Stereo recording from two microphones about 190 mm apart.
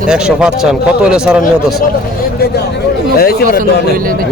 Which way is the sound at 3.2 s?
55° left (ahead or behind).